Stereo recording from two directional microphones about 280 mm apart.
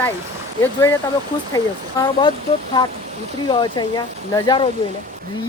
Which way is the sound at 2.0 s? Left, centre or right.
Centre.